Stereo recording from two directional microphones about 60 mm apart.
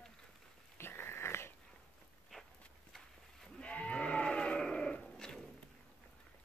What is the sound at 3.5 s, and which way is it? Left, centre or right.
Sheep, centre.